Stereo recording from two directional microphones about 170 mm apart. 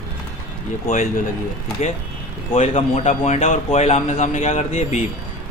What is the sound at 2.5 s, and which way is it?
Speech, 35° left (ahead or behind).